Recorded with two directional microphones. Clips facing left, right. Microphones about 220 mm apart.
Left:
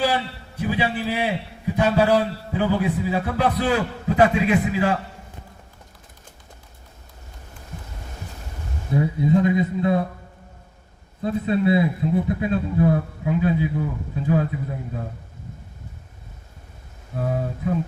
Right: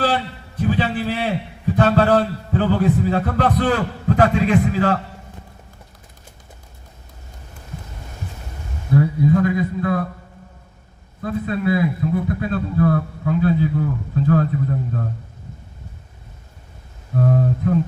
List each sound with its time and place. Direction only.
0.0 s a man's voice: 10° left (ahead or behind)
8.9 s a man's voice: 20° left (ahead or behind)
11.2 s a man's voice: 25° left (ahead or behind)
17.2 s speech: 5° left (ahead or behind)